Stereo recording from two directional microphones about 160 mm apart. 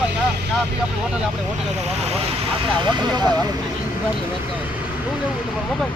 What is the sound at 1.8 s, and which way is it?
Speech, 40° right (ahead or behind).